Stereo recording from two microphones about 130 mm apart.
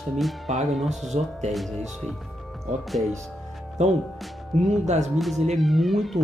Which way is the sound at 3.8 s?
65° right (ahead or behind).